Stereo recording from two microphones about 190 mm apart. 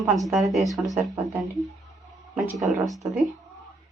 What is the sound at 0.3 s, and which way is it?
Speech, centre (ahead or behind).